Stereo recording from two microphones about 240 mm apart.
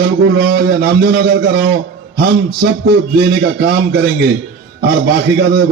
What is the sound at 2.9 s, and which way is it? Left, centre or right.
Speech, right.